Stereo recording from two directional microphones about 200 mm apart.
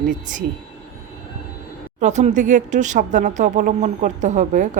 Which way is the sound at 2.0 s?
35° right (ahead or behind).